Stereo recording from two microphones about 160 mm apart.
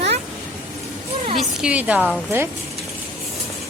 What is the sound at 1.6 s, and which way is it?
Speech, 5° right (ahead or behind).